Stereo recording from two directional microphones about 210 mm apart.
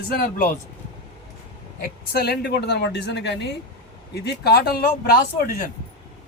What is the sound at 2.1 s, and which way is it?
Speech, 50° left (ahead or behind).